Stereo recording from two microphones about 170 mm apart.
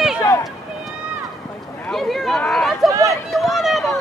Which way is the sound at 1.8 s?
Centre (ahead or behind).